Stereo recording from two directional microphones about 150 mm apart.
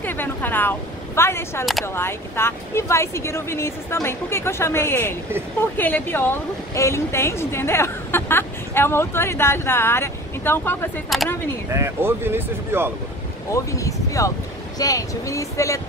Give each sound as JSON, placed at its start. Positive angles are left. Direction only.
{"t": 0.0, "sound": "a woman's voice", "side_deg": 15}
{"t": 11.1, "sound": "speech", "side_deg": 0}
{"t": 11.7, "sound": "speech", "side_deg": -15}
{"t": 13.5, "sound": "speech", "side_deg": 20}